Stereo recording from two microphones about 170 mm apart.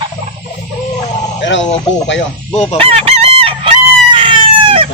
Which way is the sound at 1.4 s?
90° left.